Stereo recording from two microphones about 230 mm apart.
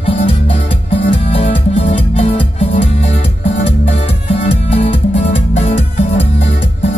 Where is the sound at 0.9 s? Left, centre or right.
Left.